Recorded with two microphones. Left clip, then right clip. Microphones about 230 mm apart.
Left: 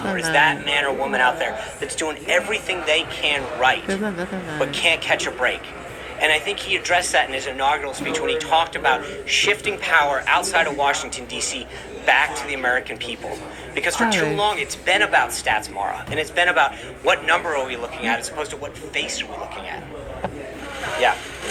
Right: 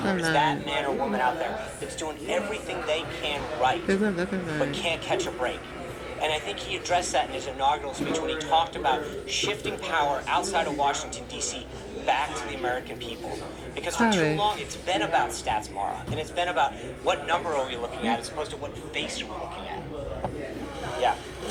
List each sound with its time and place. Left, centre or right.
0.0 s speech: centre
0.3 s a man's voice: left
20.8 s vehicle: left